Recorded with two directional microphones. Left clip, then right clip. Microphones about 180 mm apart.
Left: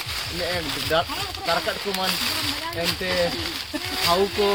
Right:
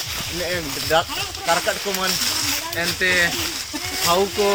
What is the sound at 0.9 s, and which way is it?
Speech, 50° right (ahead or behind).